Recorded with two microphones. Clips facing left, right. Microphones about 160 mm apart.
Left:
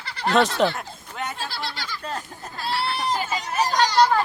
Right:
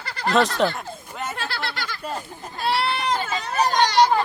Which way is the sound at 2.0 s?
10° right (ahead or behind).